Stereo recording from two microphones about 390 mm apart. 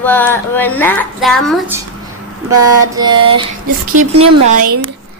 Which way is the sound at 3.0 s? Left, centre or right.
Centre.